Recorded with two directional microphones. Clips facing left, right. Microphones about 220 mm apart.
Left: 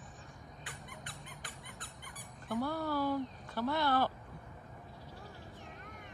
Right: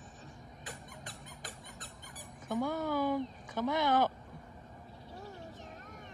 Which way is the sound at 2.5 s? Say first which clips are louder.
Right 2 dB; 15° right (ahead or behind).